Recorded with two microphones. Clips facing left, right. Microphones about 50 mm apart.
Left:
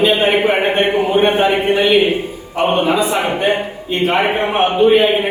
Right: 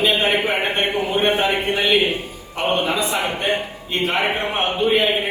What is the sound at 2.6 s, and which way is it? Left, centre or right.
A man's voice, centre.